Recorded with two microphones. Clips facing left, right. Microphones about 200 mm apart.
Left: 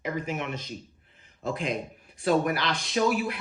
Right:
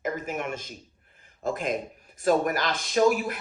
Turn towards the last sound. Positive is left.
turn(degrees=-45)  # may be behind; listen again after turning